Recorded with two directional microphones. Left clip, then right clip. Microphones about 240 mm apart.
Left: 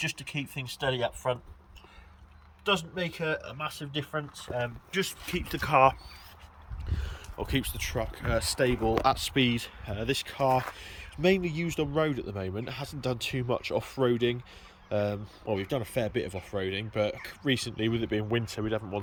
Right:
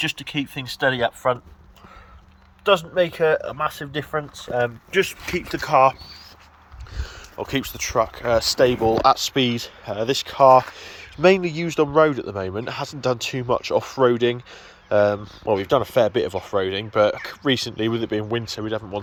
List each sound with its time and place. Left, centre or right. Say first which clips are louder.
0.9 s speech: right 9 dB; right
2.6 s speech: right 11 dB; centre
5.4 s speech: right 6 dB; centre